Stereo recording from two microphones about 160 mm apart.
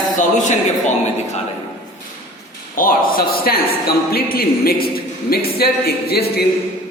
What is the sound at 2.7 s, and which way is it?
A man's voice, 65° left (ahead or behind).